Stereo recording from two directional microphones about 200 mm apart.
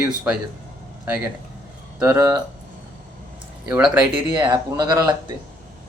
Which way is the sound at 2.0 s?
15° right (ahead or behind).